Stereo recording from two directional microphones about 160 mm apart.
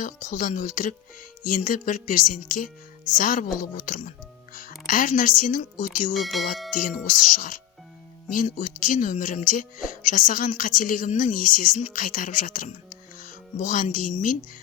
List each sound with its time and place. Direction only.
0.0 s speech: 55° left (ahead or behind)
4.5 s music: 65° left (ahead or behind)
4.9 s speech: 60° left (ahead or behind)
6.1 s speech: centre (ahead or behind)
6.7 s speech: 55° left (ahead or behind)